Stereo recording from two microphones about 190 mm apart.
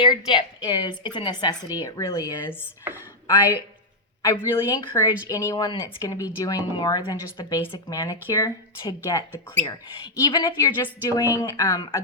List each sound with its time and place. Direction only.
0.0 s speech: 25° left (ahead or behind)
4.2 s speech: 20° left (ahead or behind)